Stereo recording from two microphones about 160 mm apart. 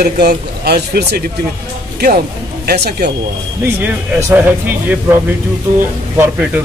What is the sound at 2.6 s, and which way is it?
Speech, 90° right.